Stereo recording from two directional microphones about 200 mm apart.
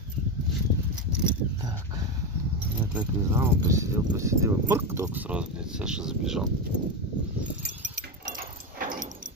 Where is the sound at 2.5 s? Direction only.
5° right (ahead or behind).